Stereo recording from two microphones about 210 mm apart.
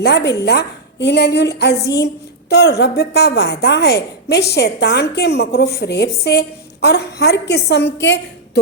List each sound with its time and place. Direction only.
0.0 s a woman's voice: 55° left (ahead or behind)